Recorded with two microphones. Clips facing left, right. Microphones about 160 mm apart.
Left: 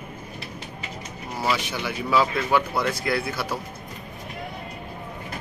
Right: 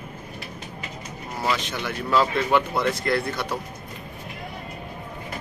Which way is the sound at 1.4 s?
5° left (ahead or behind).